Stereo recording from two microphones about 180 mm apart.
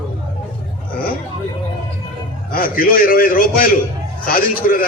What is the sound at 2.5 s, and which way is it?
A man's voice, 50° left (ahead or behind).